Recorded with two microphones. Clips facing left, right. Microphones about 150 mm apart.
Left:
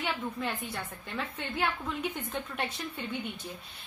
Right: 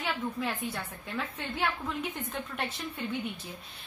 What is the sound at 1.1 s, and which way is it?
A woman's voice, centre (ahead or behind).